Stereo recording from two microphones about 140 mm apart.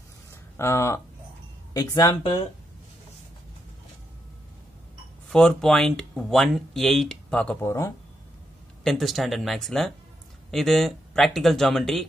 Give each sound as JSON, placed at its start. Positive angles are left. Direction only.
{"t": 0.3, "sound": "a sound", "side_deg": 20}
{"t": 1.7, "sound": "speech", "side_deg": 25}
{"t": 5.3, "sound": "speech", "side_deg": 5}
{"t": 7.6, "sound": "speech", "side_deg": 20}
{"t": 8.8, "sound": "speech", "side_deg": 0}